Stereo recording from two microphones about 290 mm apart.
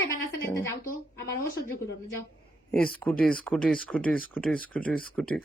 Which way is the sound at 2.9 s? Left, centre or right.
Centre.